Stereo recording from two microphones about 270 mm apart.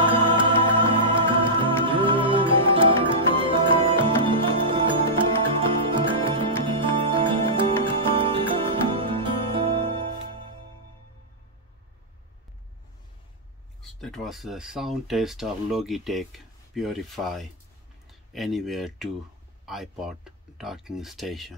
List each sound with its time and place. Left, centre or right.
0.0 s music: centre
13.8 s speech: centre